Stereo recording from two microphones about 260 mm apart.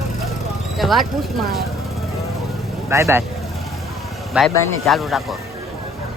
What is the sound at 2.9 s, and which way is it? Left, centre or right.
Speech, centre.